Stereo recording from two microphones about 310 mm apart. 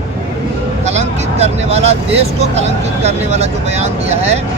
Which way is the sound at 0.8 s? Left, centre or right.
Right.